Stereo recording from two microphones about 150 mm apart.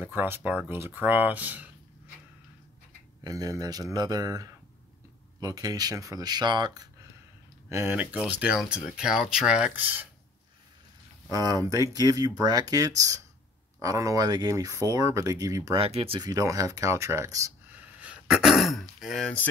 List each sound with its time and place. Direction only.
0.0 s speech: 15° right (ahead or behind)
3.3 s speech: 25° right (ahead or behind)
7.7 s speech: 10° right (ahead or behind)
11.2 s speech: 25° right (ahead or behind)
15.8 s speech: 40° right (ahead or behind)
16.2 s speech: 25° right (ahead or behind); by 19.4 s centre (ahead or behind)